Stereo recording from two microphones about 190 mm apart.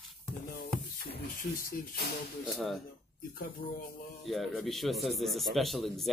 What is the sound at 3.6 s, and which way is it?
Speech, 45° left (ahead or behind).